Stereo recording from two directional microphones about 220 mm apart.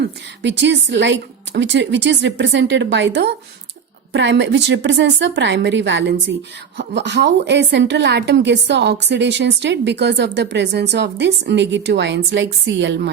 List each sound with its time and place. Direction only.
0.0 s a woman's voice: 55° right (ahead or behind)